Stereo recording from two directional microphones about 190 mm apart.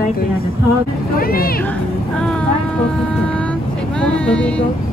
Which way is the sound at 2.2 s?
5° left (ahead or behind).